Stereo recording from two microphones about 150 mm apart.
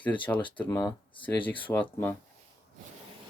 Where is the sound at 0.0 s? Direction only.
10° left (ahead or behind).